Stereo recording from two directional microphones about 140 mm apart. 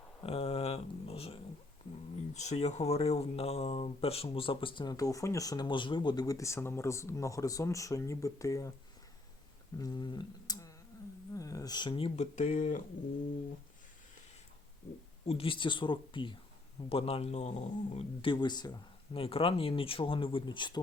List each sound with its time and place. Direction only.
0.2 s a sound: 45° left (ahead or behind)
2.3 s speech: 55° left (ahead or behind); by 8.7 s 25° left (ahead or behind)
9.7 s a sound: 30° left (ahead or behind)
11.3 s speech: 25° left (ahead or behind); by 12.2 s 40° left (ahead or behind)
12.2 s speech: 60° left (ahead or behind)
15.3 s speech: 40° left (ahead or behind)
19.2 s speech: 40° left (ahead or behind)